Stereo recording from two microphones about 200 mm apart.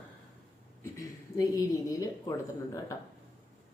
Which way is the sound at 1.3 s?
15° left (ahead or behind).